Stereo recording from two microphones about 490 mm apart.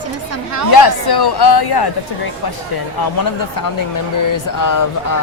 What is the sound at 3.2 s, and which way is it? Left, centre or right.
Speech, left.